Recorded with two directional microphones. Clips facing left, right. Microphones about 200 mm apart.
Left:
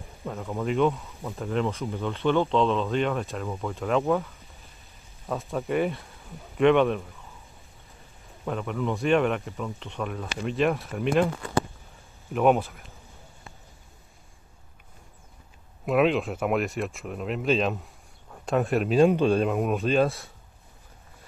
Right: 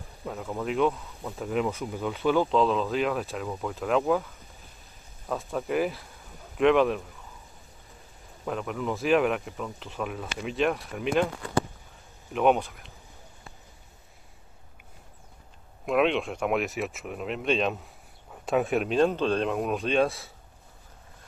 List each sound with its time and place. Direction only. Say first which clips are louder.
0.2 s speech: left 2 dB; centre (ahead or behind)
5.3 s speech: left 1 dB; centre (ahead or behind)
8.5 s speech: left 2 dB; centre (ahead or behind)
12.3 s speech: left 1 dB; centre (ahead or behind)
15.8 s speech: left 2 dB; centre (ahead or behind)